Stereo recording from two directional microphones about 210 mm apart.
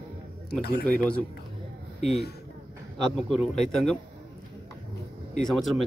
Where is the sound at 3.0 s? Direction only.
Centre (ahead or behind).